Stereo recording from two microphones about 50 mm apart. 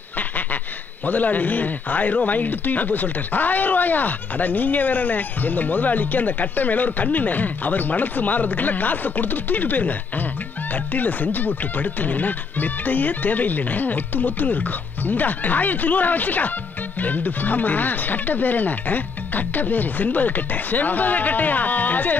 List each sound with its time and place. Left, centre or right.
1.0 s speech: left